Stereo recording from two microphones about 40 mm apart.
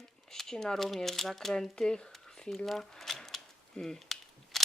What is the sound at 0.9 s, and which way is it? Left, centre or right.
Speech, centre.